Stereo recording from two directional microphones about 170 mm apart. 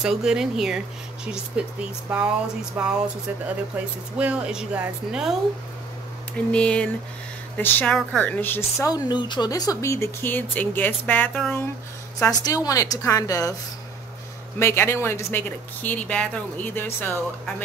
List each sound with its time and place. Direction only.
0.0 s speech: 5° right (ahead or behind)
6.3 s speech: 5° left (ahead or behind)
12.2 s a woman's voice: 20° left (ahead or behind)
14.6 s speech: 15° left (ahead or behind)